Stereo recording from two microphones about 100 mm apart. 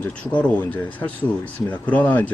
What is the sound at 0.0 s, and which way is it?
Speech, 15° left (ahead or behind).